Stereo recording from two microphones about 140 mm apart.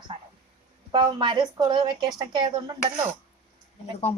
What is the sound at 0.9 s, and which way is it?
Speech, 35° right (ahead or behind).